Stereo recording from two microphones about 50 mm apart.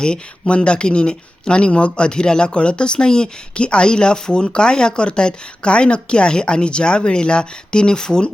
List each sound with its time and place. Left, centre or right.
0.0 s speech: centre